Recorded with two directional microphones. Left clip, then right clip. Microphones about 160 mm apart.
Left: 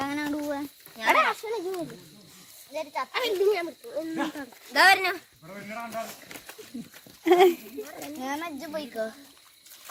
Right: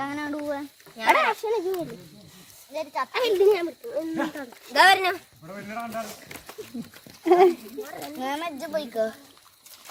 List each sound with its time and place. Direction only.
0.0 s a sound: 45° left (ahead or behind)
1.0 s a sound: 30° right (ahead or behind)
2.7 s speech: centre (ahead or behind)
3.1 s speech: 40° right (ahead or behind)
5.5 s a man's voice: 15° left (ahead or behind)
7.3 s speech: centre (ahead or behind)
7.9 s a child's voice: 30° right (ahead or behind)